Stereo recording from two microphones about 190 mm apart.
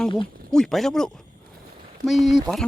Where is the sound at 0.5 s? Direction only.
Centre (ahead or behind).